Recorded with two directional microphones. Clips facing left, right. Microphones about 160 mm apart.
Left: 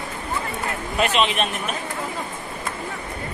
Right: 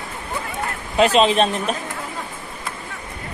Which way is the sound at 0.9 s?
35° right (ahead or behind).